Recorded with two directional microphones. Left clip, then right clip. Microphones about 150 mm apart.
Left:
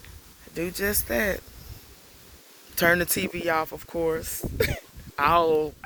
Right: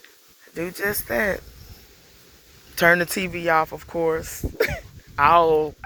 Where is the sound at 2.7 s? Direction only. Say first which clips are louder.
Right 4 dB; 35° left (ahead or behind).